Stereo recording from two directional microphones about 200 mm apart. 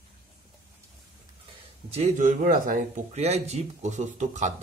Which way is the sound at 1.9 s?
35° right (ahead or behind).